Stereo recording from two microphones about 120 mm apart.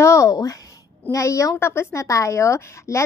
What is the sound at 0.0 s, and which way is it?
A woman's voice, 25° left (ahead or behind).